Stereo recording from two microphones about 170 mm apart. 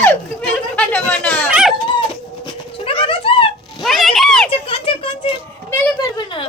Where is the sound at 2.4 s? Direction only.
35° left (ahead or behind).